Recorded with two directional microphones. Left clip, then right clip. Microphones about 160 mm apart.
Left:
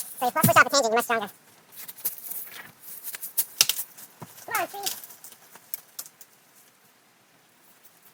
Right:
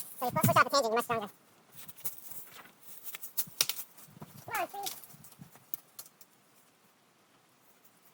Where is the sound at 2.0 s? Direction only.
25° left (ahead or behind).